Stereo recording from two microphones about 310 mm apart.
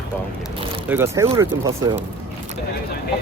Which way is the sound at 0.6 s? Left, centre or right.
Centre.